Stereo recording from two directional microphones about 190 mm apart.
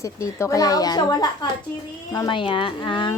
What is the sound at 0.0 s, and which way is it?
Speech, 15° left (ahead or behind).